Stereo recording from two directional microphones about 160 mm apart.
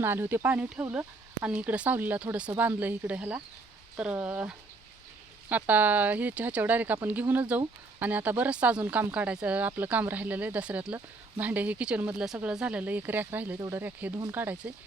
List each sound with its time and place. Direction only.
0.0 s speech: 15° right (ahead or behind)